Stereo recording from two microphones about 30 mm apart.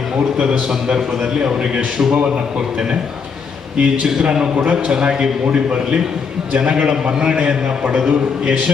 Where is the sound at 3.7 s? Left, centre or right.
Right.